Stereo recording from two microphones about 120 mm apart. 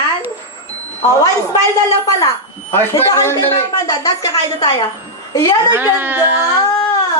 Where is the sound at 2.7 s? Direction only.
25° left (ahead or behind).